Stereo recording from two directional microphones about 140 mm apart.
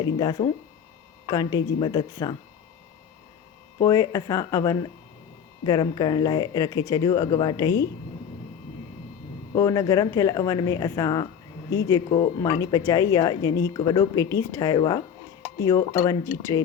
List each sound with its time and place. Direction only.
0.0 s speech: 30° left (ahead or behind)
3.8 s speech: 25° left (ahead or behind)
9.6 s speech: 25° left (ahead or behind)
15.5 s dishes: 20° left (ahead or behind)
16.0 s speech: 20° left (ahead or behind)